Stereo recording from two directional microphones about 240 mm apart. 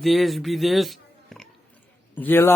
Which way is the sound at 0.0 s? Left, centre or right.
Centre.